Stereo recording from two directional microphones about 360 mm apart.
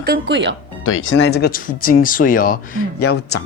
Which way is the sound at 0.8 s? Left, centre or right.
Left.